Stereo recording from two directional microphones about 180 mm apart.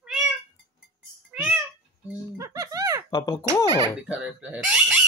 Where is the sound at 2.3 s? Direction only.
15° right (ahead or behind).